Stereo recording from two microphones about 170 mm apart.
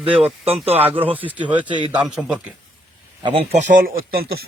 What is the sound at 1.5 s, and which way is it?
Speech, 30° right (ahead or behind).